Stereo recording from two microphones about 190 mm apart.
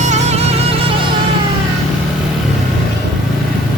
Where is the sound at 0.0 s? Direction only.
40° right (ahead or behind).